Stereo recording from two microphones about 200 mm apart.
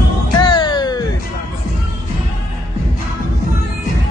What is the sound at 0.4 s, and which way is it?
Music, 20° left (ahead or behind).